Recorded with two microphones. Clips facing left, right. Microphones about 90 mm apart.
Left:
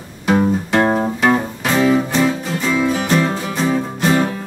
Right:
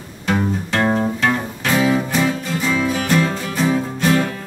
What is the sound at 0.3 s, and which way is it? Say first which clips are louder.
Music: left 5 dB; 15° left (ahead or behind).